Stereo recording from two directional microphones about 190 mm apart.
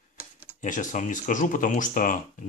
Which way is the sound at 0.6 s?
40° left (ahead or behind).